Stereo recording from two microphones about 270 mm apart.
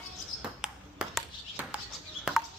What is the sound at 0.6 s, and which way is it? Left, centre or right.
Ping, centre.